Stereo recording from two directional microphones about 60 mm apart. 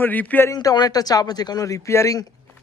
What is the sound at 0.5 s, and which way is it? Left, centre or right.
Speech, left.